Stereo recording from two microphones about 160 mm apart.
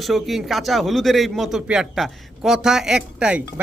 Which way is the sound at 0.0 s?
Centre (ahead or behind).